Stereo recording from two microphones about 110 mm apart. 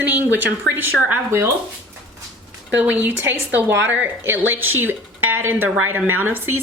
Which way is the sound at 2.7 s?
15° right (ahead or behind).